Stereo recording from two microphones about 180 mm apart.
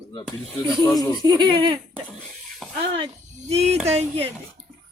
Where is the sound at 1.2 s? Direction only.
25° right (ahead or behind).